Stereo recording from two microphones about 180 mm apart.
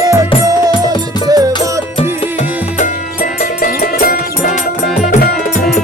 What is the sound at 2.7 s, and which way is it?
Music, 45° left (ahead or behind).